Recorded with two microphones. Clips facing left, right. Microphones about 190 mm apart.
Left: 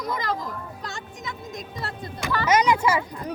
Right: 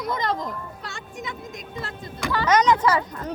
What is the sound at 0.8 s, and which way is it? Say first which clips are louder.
Music: right 1 dB; 40° left (ahead or behind).